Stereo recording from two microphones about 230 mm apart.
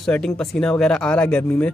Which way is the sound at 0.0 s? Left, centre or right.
Centre.